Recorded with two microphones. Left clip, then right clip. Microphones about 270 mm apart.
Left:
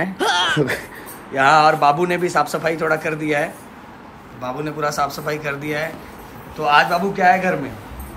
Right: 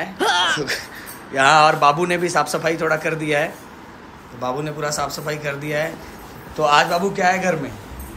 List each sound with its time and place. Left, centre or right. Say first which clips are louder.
0.2 s a sound: right 1 dB; centre
0.6 s speech: left 4 dB; left
1.3 s a man's voice: even; centre